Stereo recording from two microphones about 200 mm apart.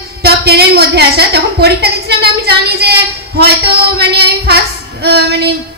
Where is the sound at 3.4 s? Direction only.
55° right (ahead or behind).